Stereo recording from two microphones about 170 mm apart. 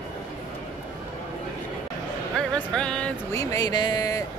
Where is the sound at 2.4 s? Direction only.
5° left (ahead or behind).